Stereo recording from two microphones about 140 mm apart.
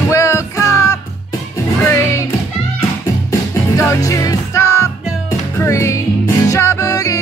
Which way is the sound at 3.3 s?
20° left (ahead or behind).